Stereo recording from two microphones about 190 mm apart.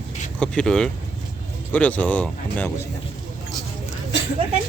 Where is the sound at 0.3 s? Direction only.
5° left (ahead or behind).